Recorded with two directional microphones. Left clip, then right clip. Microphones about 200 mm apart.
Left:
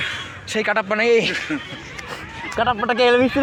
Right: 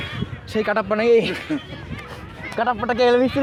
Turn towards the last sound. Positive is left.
turn(degrees=30)  # may be behind; listen again after turning